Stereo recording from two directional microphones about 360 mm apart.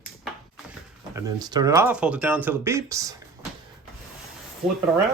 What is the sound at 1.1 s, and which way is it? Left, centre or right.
Speech, centre.